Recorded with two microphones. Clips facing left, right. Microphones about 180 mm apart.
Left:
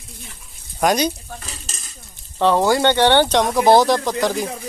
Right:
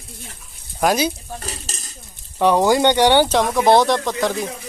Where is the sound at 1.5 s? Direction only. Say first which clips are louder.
Right 5 dB; 40° right (ahead or behind).